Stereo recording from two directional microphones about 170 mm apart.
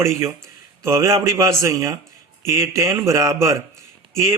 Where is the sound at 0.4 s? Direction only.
15° right (ahead or behind).